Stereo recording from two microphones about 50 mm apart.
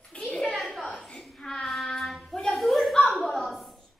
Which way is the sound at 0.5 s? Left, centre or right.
Centre.